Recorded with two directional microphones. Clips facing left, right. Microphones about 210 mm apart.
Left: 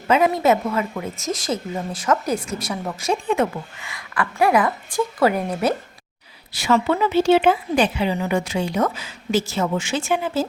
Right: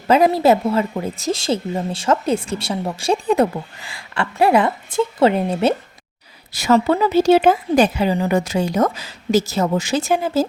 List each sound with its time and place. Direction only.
0.1 s a woman's voice: 35° right (ahead or behind)
6.5 s a woman's voice: 40° right (ahead or behind)